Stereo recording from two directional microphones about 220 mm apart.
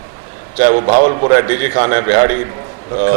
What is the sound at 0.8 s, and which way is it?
Speech, 30° right (ahead or behind).